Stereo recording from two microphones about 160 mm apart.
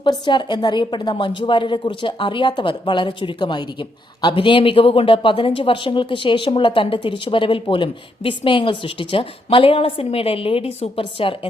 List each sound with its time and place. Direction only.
0.0 s a woman's voice: 30° left (ahead or behind)